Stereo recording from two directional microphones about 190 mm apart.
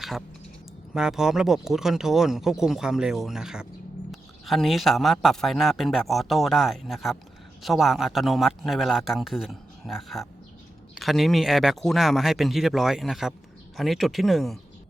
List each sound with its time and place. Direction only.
0.9 s a man's voice: 5° right (ahead or behind)